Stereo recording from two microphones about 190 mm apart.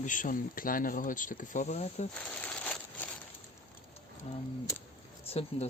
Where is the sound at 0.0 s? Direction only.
45° left (ahead or behind).